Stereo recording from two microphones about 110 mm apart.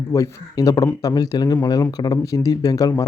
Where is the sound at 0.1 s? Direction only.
30° left (ahead or behind).